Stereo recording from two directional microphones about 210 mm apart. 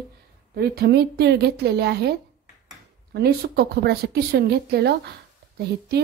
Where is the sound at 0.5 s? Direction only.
50° right (ahead or behind).